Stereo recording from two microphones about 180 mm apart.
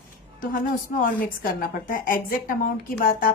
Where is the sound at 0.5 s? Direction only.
50° left (ahead or behind).